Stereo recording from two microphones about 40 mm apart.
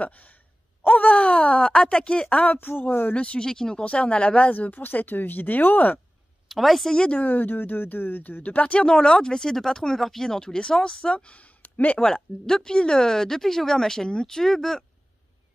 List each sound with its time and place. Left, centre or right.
0.0 s sigh: left
0.8 s speech: left
2.4 s speech: left
3.2 s speech: left
3.4 s speech: centre
3.8 s speech: left
4.5 s speech: left
6.5 s a woman's voice: centre
6.9 s speech: left
7.2 s speech: left
8.8 s speech: centre
11.3 s a sound: left
12.0 s speech: centre